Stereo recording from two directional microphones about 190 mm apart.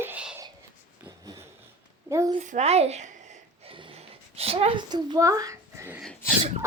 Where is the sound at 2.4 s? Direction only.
35° right (ahead or behind).